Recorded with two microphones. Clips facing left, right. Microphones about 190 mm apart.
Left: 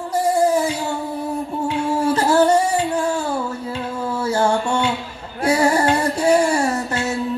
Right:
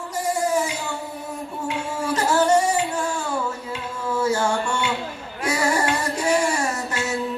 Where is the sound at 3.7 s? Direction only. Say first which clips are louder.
Left 1 dB; 35° left (ahead or behind).